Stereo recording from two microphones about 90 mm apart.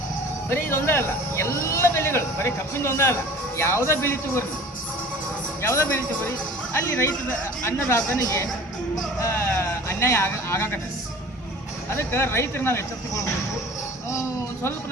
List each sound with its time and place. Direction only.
0.5 s speech: 25° left (ahead or behind)
5.6 s speech: 25° left (ahead or behind)
7.6 s speech: 35° left (ahead or behind)
11.9 s speech: 30° left (ahead or behind)